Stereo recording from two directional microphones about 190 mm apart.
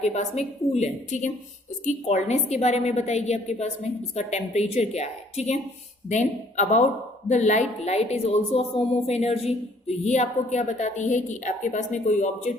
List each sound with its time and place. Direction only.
0.0 s a woman's voice: 35° left (ahead or behind)